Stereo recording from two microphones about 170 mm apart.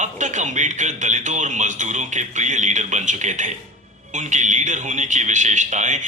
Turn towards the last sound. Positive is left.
turn(degrees=-45)  # may be behind; listen again after turning